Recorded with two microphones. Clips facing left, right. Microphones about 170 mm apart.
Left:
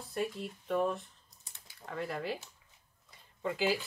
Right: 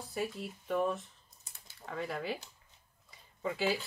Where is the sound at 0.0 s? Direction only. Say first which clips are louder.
Left 1 dB; centre (ahead or behind).